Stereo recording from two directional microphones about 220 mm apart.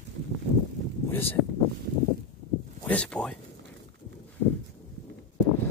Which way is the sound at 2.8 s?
5° left (ahead or behind).